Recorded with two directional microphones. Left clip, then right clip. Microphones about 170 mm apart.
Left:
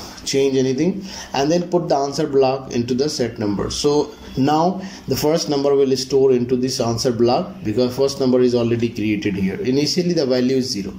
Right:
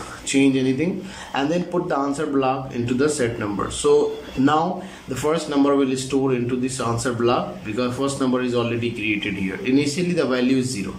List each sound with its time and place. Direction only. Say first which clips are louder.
0.3 s speech: left 2 dB; 35° left (ahead or behind)